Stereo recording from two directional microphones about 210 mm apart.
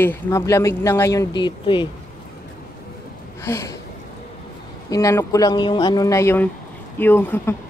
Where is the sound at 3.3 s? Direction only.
15° left (ahead or behind).